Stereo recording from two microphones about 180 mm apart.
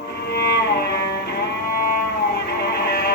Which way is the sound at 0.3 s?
65° left (ahead or behind).